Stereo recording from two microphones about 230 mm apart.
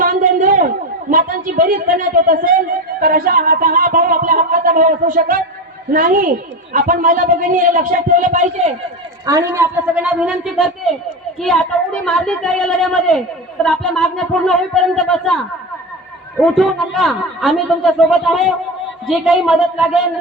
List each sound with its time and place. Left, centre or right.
0.0 s a sound: right
1.1 s a man's voice: right
9.2 s a woman's voice: centre
16.4 s a man's voice: centre